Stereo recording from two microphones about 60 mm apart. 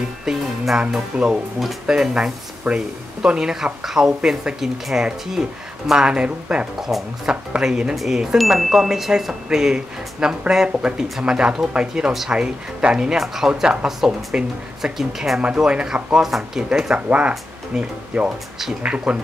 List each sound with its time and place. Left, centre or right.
0.2 s speech: centre
6.8 s speech: centre
7.5 s speech: centre
7.9 s speech: centre
13.5 s speech: centre
19.1 s speech: centre